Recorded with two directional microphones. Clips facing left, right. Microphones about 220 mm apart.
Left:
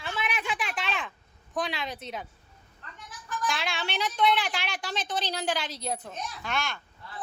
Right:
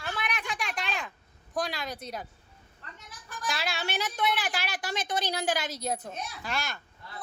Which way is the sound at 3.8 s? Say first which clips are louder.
Left 5 dB; 5° right (ahead or behind).